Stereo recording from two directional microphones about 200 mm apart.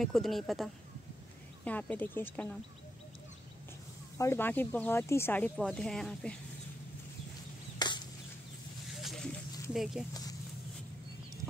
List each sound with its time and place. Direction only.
0.0 s speech: centre (ahead or behind)
4.2 s speech: 10° left (ahead or behind)
7.8 s chop: 20° left (ahead or behind)
9.0 s a sound: centre (ahead or behind)